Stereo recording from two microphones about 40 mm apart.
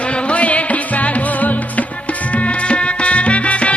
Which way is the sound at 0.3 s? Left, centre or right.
Left.